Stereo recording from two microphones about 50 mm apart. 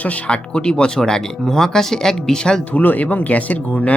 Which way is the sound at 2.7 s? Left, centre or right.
Left.